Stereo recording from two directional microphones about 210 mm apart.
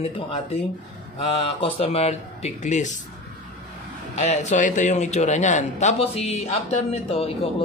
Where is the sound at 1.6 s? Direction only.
30° left (ahead or behind).